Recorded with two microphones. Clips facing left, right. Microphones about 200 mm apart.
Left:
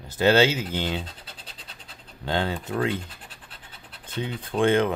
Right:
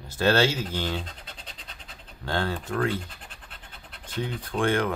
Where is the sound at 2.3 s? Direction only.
15° left (ahead or behind).